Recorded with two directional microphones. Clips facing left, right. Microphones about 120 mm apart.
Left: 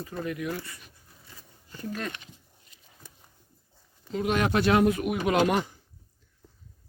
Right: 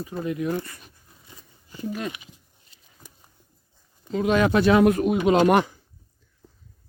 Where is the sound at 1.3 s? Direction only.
20° right (ahead or behind).